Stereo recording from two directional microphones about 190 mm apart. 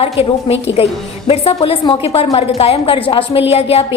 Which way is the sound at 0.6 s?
30° left (ahead or behind).